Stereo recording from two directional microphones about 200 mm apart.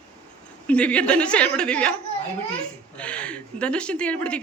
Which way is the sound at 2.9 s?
5° left (ahead or behind).